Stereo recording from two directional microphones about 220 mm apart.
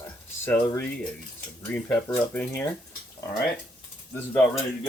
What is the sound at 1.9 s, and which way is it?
Speech, 10° left (ahead or behind).